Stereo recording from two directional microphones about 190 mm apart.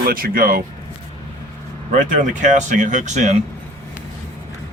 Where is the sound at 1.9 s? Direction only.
40° right (ahead or behind).